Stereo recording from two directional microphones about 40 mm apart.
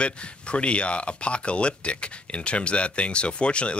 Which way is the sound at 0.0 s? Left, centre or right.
Left.